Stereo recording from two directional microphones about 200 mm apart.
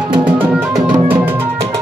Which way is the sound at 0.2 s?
10° right (ahead or behind).